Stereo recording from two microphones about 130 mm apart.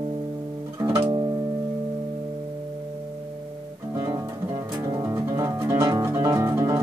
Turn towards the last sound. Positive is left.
turn(degrees=-25)  # may be behind; listen again after turning